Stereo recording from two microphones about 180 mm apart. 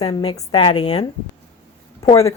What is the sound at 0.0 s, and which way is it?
A woman's voice, 25° left (ahead or behind).